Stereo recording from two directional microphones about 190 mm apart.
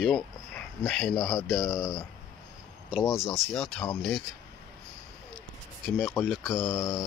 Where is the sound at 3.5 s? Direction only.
5° left (ahead or behind).